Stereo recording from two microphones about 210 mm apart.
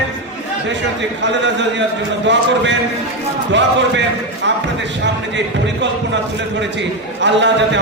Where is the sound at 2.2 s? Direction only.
60° right (ahead or behind).